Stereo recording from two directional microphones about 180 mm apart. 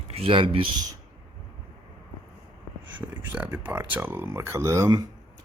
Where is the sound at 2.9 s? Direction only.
10° right (ahead or behind).